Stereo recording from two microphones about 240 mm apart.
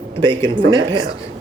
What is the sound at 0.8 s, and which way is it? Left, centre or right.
Speech, centre.